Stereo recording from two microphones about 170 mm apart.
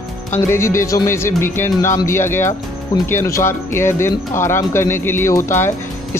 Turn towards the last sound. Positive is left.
turn(degrees=15)  # may be behind; listen again after turning